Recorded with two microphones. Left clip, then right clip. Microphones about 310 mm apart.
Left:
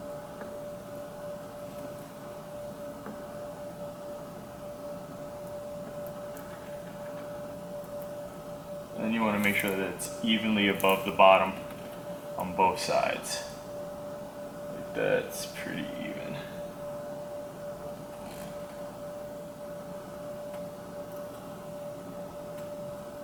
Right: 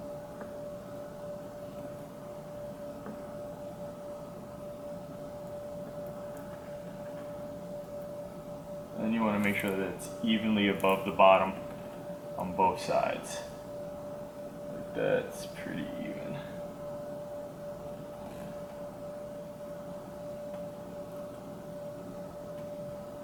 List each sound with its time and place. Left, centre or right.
9.0 s speech: centre
14.9 s speech: centre